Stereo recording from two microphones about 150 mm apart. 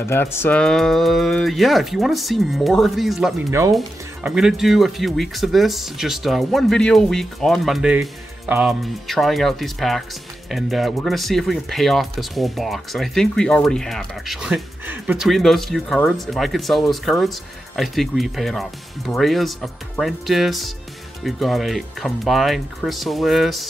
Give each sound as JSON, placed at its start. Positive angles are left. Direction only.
{"t": 0.0, "sound": "speech", "side_deg": 15}
{"t": 3.4, "sound": "speech", "side_deg": -20}
{"t": 3.7, "sound": "speech", "side_deg": -5}